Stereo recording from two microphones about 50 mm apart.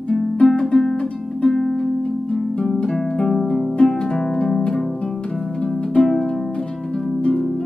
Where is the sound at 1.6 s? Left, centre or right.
Centre.